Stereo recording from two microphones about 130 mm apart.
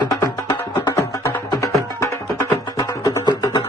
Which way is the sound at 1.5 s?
25° left (ahead or behind).